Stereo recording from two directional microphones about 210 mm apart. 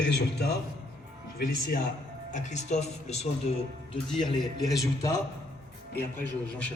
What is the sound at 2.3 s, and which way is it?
Speech, 35° left (ahead or behind).